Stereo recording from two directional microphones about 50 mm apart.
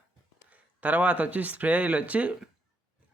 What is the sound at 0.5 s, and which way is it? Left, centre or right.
Speech, right.